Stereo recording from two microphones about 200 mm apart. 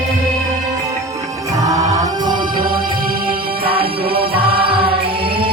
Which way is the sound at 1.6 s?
15° right (ahead or behind).